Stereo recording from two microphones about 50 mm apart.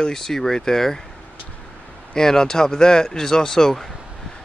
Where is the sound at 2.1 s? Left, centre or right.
Centre.